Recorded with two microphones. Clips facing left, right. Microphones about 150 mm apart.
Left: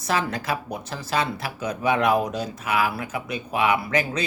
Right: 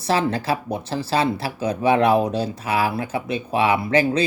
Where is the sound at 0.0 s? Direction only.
30° right (ahead or behind).